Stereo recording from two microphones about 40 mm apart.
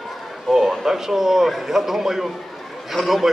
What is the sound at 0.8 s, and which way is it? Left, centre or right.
A man's voice, centre.